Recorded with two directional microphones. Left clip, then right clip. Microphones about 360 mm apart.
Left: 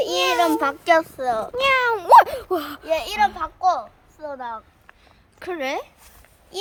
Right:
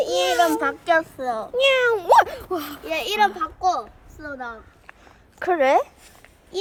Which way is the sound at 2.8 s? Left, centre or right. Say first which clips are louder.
Right 1 dB; centre.